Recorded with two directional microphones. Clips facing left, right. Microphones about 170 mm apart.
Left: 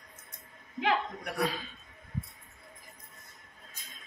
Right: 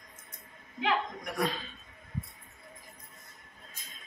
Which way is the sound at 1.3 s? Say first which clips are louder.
Even; 10° left (ahead or behind).